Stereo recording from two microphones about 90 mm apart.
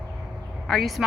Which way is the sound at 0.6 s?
Centre (ahead or behind).